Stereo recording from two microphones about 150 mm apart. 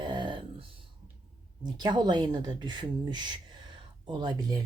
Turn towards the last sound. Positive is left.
turn(degrees=-30)  # may be behind; listen again after turning